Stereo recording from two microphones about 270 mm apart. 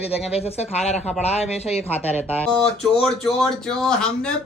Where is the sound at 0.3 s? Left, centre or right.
Left.